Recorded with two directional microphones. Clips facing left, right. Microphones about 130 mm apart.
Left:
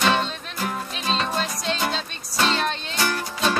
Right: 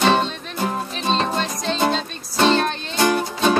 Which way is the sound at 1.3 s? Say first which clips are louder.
Right 3 dB; 5° left (ahead or behind).